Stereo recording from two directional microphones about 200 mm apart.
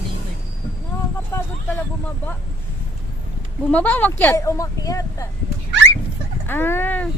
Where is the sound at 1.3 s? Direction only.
15° left (ahead or behind).